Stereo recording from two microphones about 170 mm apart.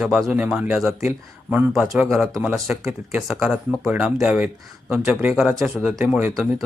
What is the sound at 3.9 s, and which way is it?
Speech, 5° right (ahead or behind).